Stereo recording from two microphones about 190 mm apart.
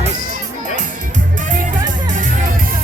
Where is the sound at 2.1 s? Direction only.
45° right (ahead or behind).